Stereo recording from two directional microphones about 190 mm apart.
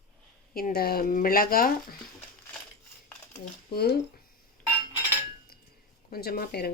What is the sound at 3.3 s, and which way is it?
Speech, 55° left (ahead or behind).